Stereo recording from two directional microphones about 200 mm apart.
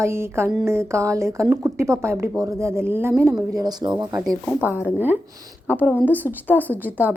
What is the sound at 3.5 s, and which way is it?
Speech, 20° right (ahead or behind).